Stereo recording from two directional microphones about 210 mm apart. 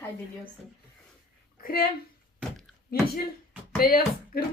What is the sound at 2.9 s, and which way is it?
Speech, 45° left (ahead or behind).